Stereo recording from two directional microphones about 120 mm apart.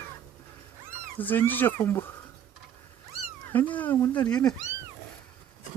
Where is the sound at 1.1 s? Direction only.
15° left (ahead or behind).